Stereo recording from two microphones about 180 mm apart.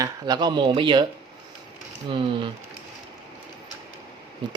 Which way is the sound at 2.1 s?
25° right (ahead or behind).